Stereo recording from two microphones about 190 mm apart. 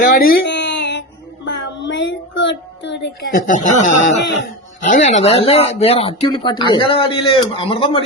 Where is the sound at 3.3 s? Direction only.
45° left (ahead or behind).